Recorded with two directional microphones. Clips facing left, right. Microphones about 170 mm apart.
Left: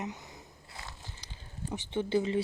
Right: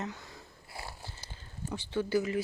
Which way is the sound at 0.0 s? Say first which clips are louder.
Even; 20° left (ahead or behind).